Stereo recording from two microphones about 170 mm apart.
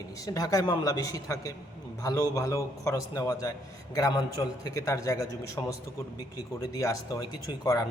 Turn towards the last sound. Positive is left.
turn(degrees=20)  # may be behind; listen again after turning